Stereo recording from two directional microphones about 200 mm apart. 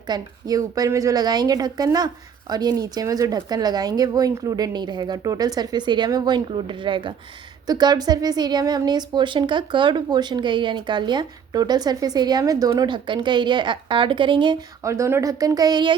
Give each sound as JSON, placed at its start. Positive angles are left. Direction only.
{"t": 0.1, "sound": "a woman's voice", "side_deg": -20}